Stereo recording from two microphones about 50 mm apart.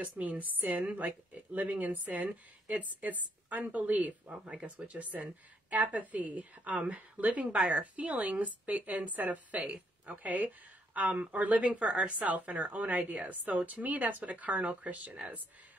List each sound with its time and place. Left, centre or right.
0.0 s a woman's voice: right
4.3 s speech: centre
4.7 s a woman's voice: right